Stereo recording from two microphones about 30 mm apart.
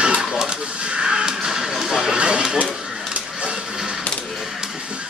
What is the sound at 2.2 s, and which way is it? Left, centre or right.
Speech, right.